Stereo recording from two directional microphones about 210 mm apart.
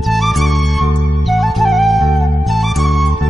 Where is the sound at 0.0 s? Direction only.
Centre (ahead or behind).